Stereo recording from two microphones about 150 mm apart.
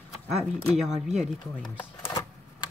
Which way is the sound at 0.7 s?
5° right (ahead or behind).